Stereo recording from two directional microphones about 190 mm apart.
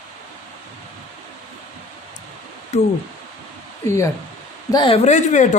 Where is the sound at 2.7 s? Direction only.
35° left (ahead or behind).